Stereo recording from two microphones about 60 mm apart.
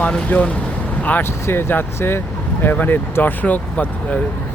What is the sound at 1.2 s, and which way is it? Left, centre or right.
Speech, left.